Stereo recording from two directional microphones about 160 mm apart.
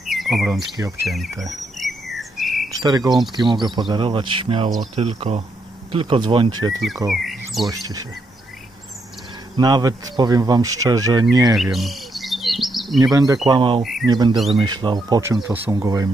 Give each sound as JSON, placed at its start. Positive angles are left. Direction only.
{"t": 0.0, "sound": "bird", "side_deg": 0}
{"t": 1.0, "sound": "speech", "side_deg": 0}
{"t": 1.8, "sound": "chirp", "side_deg": 0}
{"t": 2.8, "sound": "speech", "side_deg": -25}
{"t": 7.1, "sound": "speech", "side_deg": 0}
{"t": 7.6, "sound": "speech", "side_deg": -25}
{"t": 9.6, "sound": "speech", "side_deg": -25}
{"t": 11.5, "sound": "bird", "side_deg": 0}
{"t": 13.0, "sound": "speech", "side_deg": -25}